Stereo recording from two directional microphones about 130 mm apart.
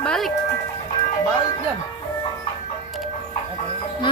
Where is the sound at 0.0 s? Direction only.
5° left (ahead or behind).